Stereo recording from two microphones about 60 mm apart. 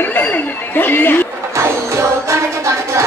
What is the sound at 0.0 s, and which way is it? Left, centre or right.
Chatter, left.